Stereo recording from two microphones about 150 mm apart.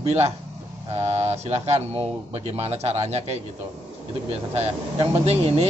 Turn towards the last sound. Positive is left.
turn(degrees=-40)  # may be behind; listen again after turning